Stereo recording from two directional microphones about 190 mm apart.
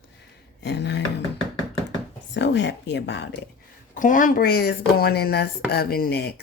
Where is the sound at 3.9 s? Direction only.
45° left (ahead or behind).